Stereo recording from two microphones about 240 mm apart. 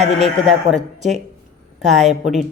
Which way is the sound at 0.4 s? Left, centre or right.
Right.